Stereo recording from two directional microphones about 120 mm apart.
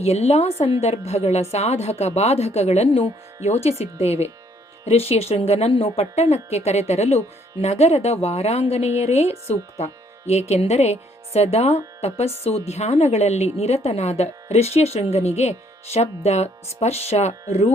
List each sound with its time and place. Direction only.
0.0 s speech: 60° left (ahead or behind)